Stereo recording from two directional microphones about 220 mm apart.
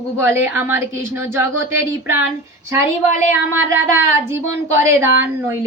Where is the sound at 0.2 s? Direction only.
10° right (ahead or behind).